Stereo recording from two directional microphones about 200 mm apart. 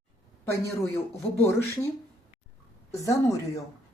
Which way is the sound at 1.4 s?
15° left (ahead or behind).